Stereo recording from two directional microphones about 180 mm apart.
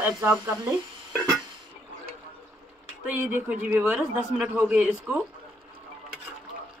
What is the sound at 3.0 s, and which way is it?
Speech, 10° right (ahead or behind).